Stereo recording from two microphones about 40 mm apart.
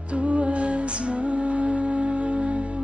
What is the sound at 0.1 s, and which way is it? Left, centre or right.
Music, right.